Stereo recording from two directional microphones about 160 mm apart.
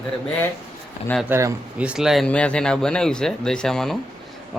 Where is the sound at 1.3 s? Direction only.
20° right (ahead or behind).